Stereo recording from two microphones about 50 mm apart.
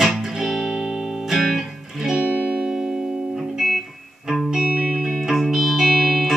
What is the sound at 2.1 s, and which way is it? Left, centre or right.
Music, right.